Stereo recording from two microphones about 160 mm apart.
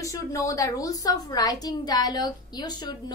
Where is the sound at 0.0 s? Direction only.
20° left (ahead or behind).